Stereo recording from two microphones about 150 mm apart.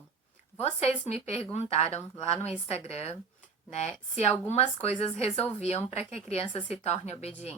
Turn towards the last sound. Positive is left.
turn(degrees=45)  # may be behind; listen again after turning